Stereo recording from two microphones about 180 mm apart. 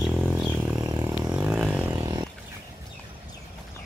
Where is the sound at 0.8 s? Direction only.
20° right (ahead or behind).